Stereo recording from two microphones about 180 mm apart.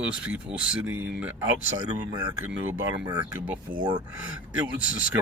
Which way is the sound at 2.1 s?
20° right (ahead or behind).